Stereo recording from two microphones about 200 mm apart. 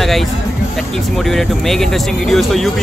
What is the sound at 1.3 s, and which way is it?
Speech, centre (ahead or behind).